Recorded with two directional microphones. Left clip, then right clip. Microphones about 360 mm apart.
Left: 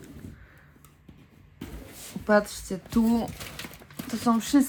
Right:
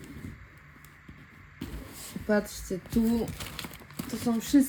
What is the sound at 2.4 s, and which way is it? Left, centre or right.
Speech, right.